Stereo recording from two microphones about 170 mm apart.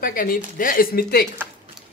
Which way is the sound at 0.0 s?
55° left (ahead or behind).